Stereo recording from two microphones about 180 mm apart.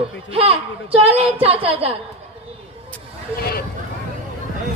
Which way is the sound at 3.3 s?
55° left (ahead or behind).